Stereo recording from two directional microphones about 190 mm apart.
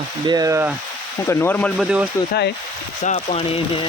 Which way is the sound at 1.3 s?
10° left (ahead or behind).